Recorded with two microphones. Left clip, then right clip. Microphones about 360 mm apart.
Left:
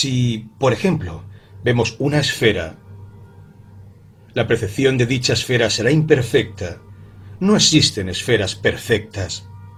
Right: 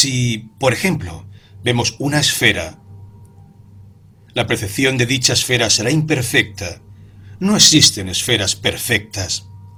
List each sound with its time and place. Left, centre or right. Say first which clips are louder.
0.0 s speech: right 4 dB; centre
4.4 s speech: even; centre